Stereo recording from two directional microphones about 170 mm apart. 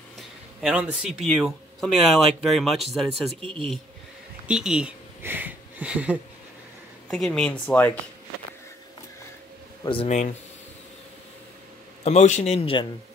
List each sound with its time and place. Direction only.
0.6 s a man's voice: 5° right (ahead or behind)
3.3 s speech: 35° right (ahead or behind)
4.5 s speech: 5° right (ahead or behind)
7.1 s speech: 5° left (ahead or behind)
10.0 s speech: 45° left (ahead or behind)
12.0 s a man's voice: 40° left (ahead or behind)